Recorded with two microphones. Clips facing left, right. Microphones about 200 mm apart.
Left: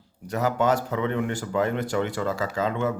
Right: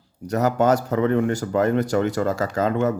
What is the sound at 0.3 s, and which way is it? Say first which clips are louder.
Speech: right 4 dB; 40° right (ahead or behind).